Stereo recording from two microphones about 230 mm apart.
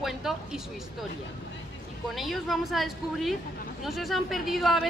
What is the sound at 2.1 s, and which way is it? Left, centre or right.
A woman's voice, centre.